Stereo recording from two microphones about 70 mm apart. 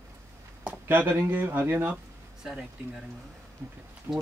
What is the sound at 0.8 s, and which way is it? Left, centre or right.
Speech, right.